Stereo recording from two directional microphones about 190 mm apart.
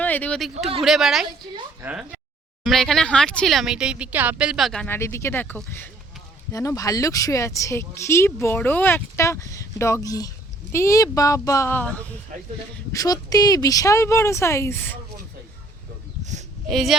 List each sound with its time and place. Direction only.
0.0 s speech: 10° left (ahead or behind)
16.6 s speech: centre (ahead or behind)